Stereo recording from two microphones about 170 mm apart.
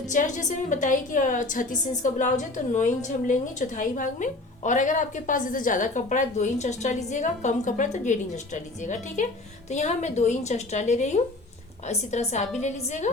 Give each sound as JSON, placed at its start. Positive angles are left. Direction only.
{"t": 0.1, "sound": "a woman's voice", "side_deg": 50}